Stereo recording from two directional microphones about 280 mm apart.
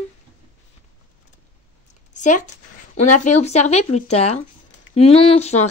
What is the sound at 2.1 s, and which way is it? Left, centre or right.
Speech, left.